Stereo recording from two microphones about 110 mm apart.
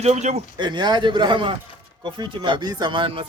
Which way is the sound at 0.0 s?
90° right.